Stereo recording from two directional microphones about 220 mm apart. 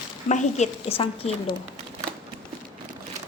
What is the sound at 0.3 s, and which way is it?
A woman's voice, 30° left (ahead or behind).